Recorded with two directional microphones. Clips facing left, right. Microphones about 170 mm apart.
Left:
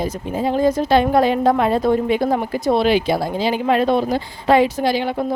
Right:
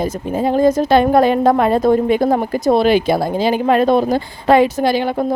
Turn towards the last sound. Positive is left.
turn(degrees=-50)  # may be behind; listen again after turning